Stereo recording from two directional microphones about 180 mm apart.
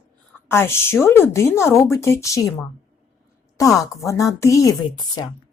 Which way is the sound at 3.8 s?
15° left (ahead or behind).